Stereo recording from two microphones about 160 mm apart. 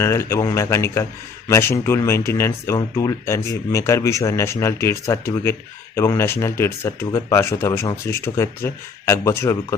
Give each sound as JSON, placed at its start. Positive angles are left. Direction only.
{"t": 0.0, "sound": "speech", "side_deg": 15}